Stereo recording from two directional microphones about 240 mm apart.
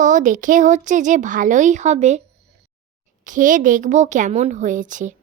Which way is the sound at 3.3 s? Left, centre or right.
Right.